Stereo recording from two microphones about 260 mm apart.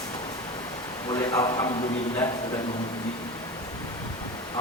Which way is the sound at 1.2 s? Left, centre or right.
Centre.